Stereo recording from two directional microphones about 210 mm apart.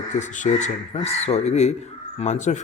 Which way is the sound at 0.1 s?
35° left (ahead or behind).